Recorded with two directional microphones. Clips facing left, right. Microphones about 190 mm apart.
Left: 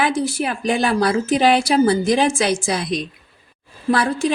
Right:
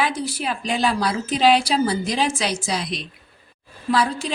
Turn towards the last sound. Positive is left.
turn(degrees=50)  # may be behind; listen again after turning